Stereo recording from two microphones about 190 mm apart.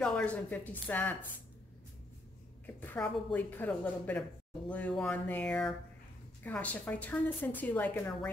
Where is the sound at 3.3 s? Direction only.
10° left (ahead or behind).